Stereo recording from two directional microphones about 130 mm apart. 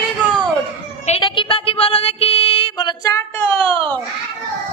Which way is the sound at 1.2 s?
40° left (ahead or behind).